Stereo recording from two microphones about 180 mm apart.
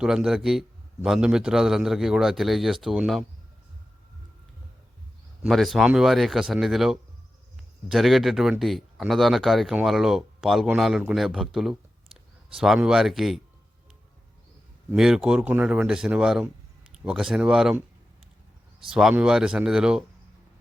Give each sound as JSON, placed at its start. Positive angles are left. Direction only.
{"t": 0.0, "sound": "speech", "side_deg": -5}
{"t": 5.4, "sound": "speech", "side_deg": 0}
{"t": 14.9, "sound": "speech", "side_deg": -5}
{"t": 18.9, "sound": "speech", "side_deg": -5}